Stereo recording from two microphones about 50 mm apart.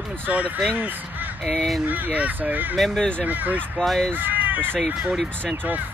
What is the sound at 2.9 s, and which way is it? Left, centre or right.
Speech, left.